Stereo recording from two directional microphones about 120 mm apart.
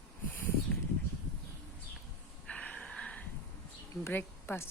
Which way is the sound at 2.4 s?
10° left (ahead or behind).